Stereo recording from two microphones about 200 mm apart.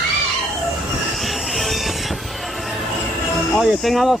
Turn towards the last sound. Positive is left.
turn(degrees=0)  # may be behind; listen again after turning